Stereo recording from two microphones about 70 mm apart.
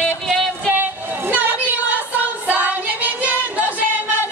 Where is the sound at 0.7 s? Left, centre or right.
Right.